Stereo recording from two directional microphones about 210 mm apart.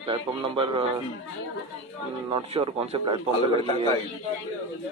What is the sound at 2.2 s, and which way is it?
Speech, 25° right (ahead or behind).